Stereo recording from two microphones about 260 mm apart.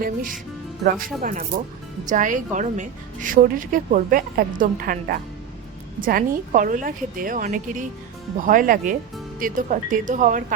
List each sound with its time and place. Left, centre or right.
0.0 s a woman's voice: right